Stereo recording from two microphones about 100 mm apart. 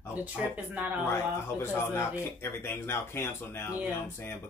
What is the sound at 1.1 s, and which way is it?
Speech, 25° left (ahead or behind).